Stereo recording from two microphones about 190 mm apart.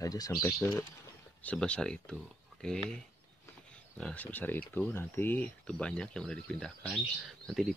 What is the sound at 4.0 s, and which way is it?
Speech, 5° left (ahead or behind).